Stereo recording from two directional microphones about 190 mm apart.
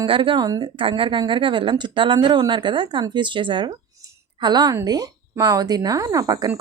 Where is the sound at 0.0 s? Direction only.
25° right (ahead or behind).